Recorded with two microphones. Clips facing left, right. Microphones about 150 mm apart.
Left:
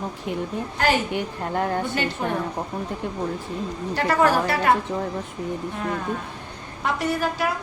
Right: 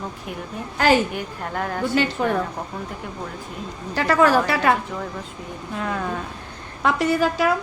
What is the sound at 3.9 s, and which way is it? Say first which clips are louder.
Speech: right 3 dB; 90° right.